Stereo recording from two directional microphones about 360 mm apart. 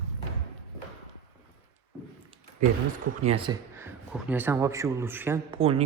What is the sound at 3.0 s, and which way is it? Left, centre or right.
A man's voice, centre.